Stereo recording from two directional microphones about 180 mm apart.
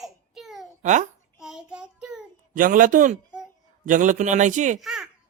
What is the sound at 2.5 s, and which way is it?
A man's voice, 50° right (ahead or behind).